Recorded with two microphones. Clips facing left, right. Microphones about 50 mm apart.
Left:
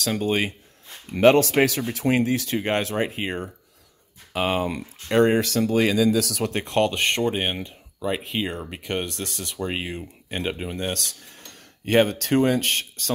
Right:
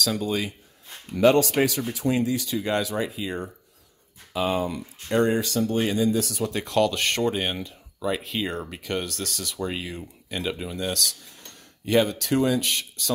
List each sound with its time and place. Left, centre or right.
0.0 s speech: left
6.5 s speech: left